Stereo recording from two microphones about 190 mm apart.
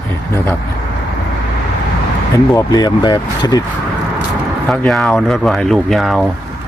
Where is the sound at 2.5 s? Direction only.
20° left (ahead or behind).